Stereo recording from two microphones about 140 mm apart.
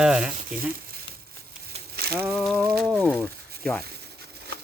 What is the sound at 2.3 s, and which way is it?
Speech, centre (ahead or behind).